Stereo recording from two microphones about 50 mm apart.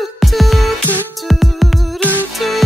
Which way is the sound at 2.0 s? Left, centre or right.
Left.